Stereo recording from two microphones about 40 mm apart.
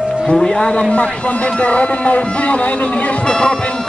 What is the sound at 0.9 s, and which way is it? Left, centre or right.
Speech, left.